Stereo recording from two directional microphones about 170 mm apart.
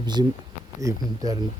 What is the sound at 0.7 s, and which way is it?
Speech, 20° right (ahead or behind).